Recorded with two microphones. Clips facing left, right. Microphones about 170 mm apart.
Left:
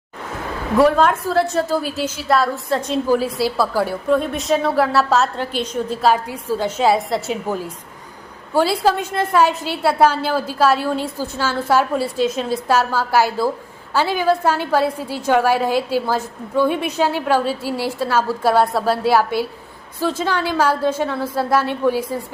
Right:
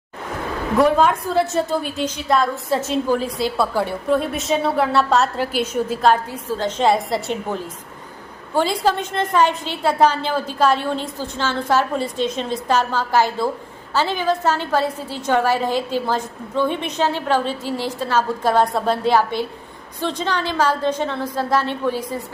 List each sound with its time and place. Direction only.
0.8 s a woman's voice: centre (ahead or behind)